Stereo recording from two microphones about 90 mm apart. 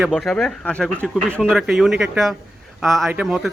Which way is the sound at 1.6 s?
5° right (ahead or behind).